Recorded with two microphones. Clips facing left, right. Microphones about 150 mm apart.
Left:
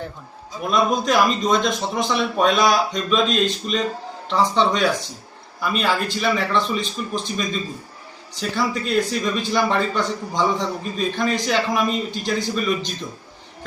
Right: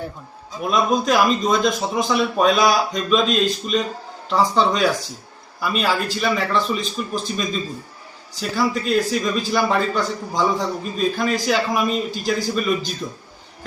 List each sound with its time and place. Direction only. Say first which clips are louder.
0.7 s a man's voice: right 1 dB; centre (ahead or behind)